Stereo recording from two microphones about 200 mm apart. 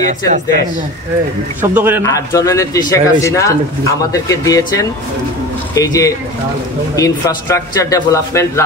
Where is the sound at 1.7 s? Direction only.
10° right (ahead or behind).